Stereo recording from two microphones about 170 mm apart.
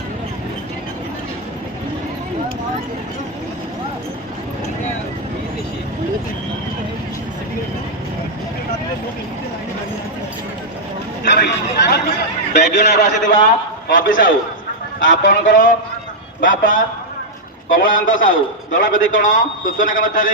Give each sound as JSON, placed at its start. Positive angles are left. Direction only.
{"t": 11.3, "sound": "chatter", "side_deg": 75}
{"t": 12.5, "sound": "a man's voice", "side_deg": 45}
{"t": 15.0, "sound": "speech", "side_deg": 90}
{"t": 15.3, "sound": "a man's voice", "side_deg": 50}